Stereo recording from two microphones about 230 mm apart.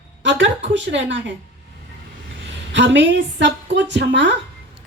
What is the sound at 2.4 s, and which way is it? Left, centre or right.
A woman's voice, right.